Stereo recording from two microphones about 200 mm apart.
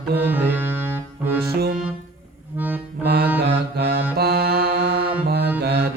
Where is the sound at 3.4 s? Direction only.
55° right (ahead or behind).